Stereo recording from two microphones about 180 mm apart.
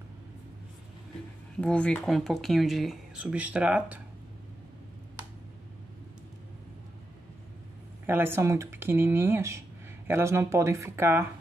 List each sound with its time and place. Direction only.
1.6 s speech: 5° left (ahead or behind)
8.1 s speech: 15° right (ahead or behind)